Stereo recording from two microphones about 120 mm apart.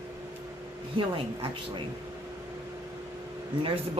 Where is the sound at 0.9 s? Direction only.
45° right (ahead or behind).